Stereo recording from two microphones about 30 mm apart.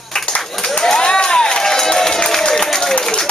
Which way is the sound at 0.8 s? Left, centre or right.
Left.